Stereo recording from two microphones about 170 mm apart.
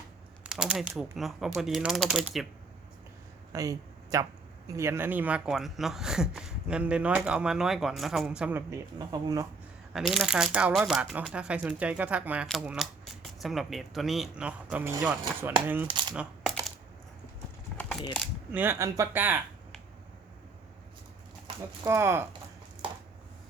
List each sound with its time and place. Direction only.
0.4 s speech: 5° right (ahead or behind)
3.5 s a sound: 20° right (ahead or behind)
4.8 s speech: 15° right (ahead or behind)
9.0 s speech: 25° right (ahead or behind)
9.9 s speech: centre (ahead or behind)
16.5 s typing: 5° left (ahead or behind)
18.5 s speech: 10° right (ahead or behind)
21.8 s speech: 15° right (ahead or behind)